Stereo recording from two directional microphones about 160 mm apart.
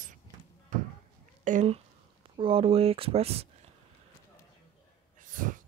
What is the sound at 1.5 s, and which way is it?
Speech, 45° right (ahead or behind).